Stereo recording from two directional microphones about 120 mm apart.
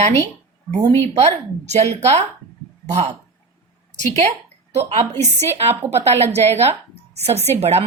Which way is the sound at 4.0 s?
70° right (ahead or behind).